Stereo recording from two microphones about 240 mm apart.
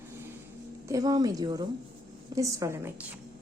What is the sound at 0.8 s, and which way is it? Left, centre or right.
A woman's voice, centre.